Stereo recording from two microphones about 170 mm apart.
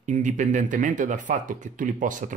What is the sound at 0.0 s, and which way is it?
Speech, 45° right (ahead or behind).